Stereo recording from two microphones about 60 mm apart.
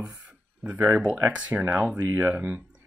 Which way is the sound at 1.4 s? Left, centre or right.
Right.